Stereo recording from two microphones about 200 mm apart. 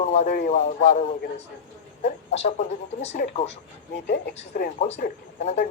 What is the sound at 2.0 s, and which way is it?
Speech, 35° left (ahead or behind).